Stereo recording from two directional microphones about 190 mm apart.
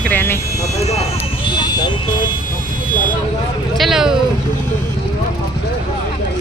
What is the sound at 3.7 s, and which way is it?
Speech, centre (ahead or behind).